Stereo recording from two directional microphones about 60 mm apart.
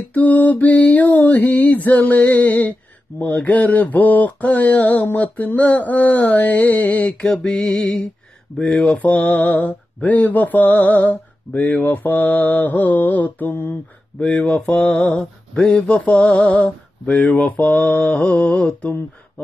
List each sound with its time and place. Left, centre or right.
0.1 s mantra: left
3.1 s mantra: left
3.4 s mantra: left
8.5 s speech: centre
9.3 s mantra: left
13.5 s a sound: left
14.2 s mantra: left
15.0 s a sound: centre
15.6 s speech: centre
15.9 s mantra: centre
17.0 s speech: centre
17.3 s mantra: left